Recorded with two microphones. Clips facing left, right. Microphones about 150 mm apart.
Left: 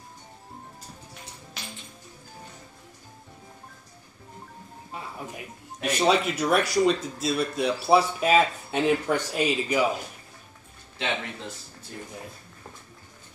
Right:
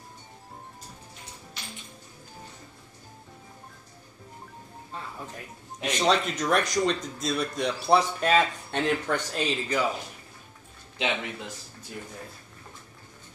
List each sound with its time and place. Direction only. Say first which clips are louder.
4.9 s speech: left 2 dB; 10° left (ahead or behind)
11.0 s speech: right 1 dB; 15° right (ahead or behind)